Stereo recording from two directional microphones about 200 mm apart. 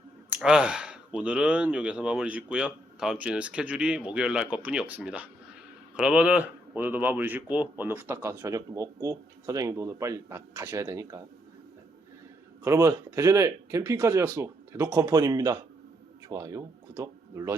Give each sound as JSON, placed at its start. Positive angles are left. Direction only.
{"t": 0.3, "sound": "a man's voice", "side_deg": -5}
{"t": 12.6, "sound": "a man's voice", "side_deg": -15}